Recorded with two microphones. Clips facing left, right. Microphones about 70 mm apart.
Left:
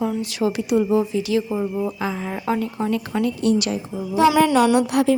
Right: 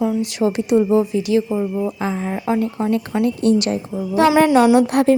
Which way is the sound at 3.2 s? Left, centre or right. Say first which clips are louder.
Right 3 dB; right.